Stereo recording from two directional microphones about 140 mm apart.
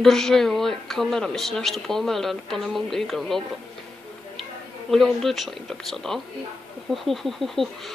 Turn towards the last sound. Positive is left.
turn(degrees=0)  # may be behind; listen again after turning